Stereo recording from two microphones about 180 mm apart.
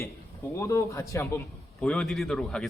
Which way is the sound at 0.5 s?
15° left (ahead or behind).